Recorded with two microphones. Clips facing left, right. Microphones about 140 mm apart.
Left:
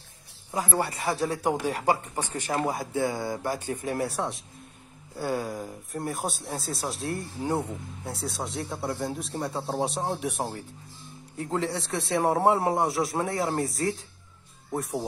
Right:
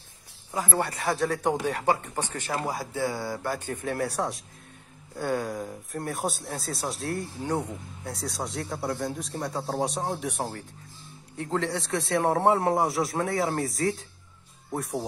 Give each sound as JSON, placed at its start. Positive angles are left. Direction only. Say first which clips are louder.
{"t": 0.8, "sound": "speech", "louder": "right 1 dB", "side_deg": 0}
{"t": 2.5, "sound": "speech", "louder": "left 3 dB", "side_deg": 25}
{"t": 4.0, "sound": "speech", "louder": "right 1 dB", "side_deg": 0}